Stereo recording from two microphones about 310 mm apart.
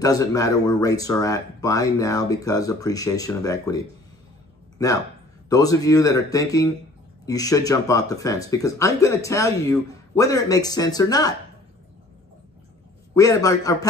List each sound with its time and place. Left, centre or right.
0.0 s speech: centre
13.1 s speech: centre